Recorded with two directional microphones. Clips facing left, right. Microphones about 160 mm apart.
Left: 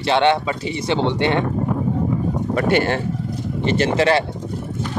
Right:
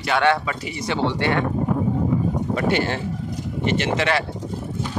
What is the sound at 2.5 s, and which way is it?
Speech, 55° left (ahead or behind).